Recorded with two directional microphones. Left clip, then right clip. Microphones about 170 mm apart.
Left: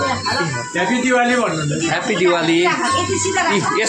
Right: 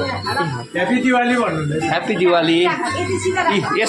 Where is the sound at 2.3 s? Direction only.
25° right (ahead or behind).